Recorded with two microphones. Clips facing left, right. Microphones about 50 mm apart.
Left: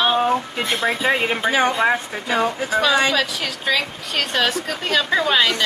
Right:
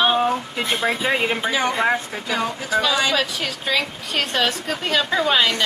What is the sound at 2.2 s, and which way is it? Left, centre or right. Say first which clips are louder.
Speech: left 7 dB; left.